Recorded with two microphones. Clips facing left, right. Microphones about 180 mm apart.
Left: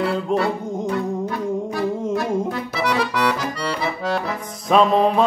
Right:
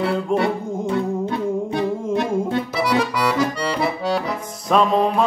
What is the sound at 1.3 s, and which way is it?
Music, 25° right (ahead or behind).